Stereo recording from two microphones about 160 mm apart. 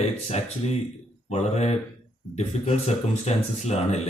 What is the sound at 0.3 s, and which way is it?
Speech, 40° left (ahead or behind).